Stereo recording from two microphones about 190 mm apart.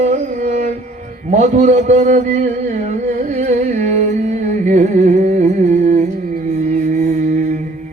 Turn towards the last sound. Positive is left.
turn(degrees=-45)  # may be behind; listen again after turning